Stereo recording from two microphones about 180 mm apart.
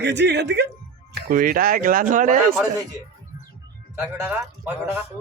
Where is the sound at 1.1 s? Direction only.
55° right (ahead or behind).